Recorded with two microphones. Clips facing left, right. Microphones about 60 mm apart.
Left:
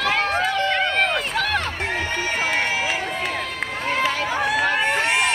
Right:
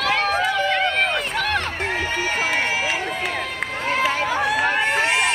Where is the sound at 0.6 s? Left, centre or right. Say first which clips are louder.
Even; centre.